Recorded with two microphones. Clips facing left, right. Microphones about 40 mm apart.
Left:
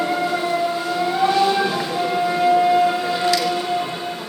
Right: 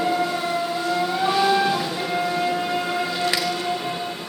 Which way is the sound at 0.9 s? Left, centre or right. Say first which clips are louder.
Left 2 dB; centre.